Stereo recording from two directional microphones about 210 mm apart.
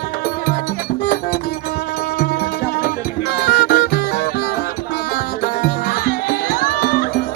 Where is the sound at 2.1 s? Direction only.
50° left (ahead or behind).